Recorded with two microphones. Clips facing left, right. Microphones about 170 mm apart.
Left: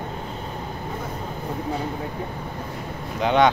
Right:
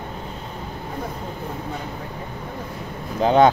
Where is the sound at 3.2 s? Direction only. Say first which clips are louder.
Right 3 dB; 35° right (ahead or behind).